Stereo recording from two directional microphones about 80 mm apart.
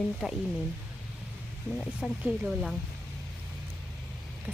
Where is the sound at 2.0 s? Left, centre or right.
Centre.